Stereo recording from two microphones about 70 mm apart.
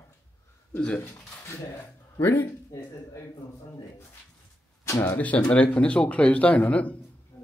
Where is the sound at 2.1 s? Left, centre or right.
Left.